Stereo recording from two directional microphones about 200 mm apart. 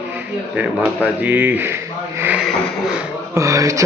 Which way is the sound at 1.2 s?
10° right (ahead or behind).